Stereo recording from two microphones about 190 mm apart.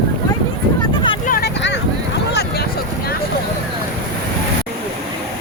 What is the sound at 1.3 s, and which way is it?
Vehicle, 60° left (ahead or behind).